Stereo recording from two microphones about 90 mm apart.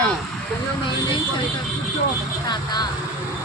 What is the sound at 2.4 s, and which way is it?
Speech, 50° left (ahead or behind).